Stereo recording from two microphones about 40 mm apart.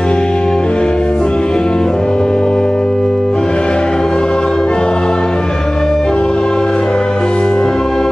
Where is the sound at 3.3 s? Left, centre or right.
Left.